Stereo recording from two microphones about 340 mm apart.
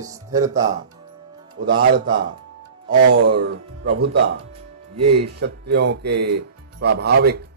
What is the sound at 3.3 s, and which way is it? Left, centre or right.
Speech, right.